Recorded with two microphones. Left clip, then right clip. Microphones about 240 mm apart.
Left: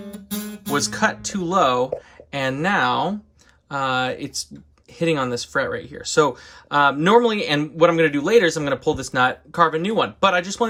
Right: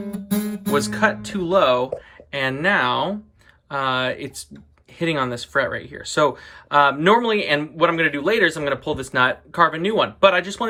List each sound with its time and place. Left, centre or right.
0.7 s speech: centre